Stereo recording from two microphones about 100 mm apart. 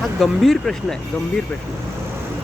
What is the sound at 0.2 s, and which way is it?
Speech, 5° left (ahead or behind).